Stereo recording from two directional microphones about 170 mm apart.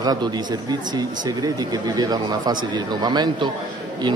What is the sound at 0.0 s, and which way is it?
Speech, 25° right (ahead or behind).